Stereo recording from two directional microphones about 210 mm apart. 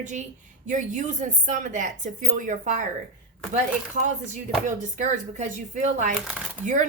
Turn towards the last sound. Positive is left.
turn(degrees=-35)  # may be behind; listen again after turning